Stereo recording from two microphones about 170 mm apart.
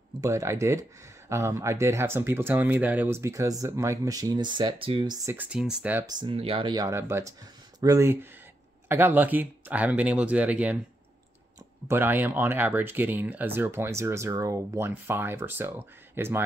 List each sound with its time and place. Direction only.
0.2 s speech: 15° right (ahead or behind)
5.3 s speech: 10° right (ahead or behind)
6.0 s speech: 25° right (ahead or behind); by 10.8 s 10° right (ahead or behind)
11.9 s speech: 10° right (ahead or behind)